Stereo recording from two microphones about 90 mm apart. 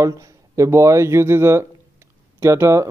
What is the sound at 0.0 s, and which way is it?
Speech, 35° right (ahead or behind).